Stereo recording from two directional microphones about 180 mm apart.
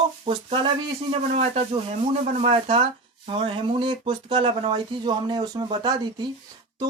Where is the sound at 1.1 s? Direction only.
35° right (ahead or behind).